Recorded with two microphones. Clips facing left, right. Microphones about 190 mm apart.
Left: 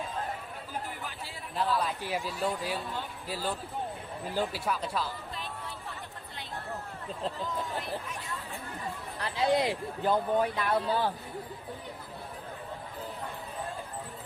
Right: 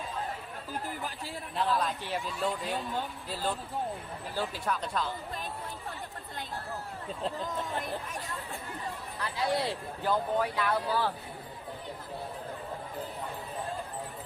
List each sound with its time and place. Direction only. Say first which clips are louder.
1.5 s speech: even; centre (ahead or behind)
9.4 s speech: left 4 dB; 20° left (ahead or behind)